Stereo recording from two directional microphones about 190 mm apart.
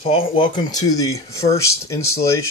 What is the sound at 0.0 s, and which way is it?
Speech, 30° left (ahead or behind).